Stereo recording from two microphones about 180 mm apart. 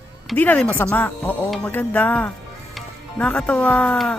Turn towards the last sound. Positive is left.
turn(degrees=5)  # may be behind; listen again after turning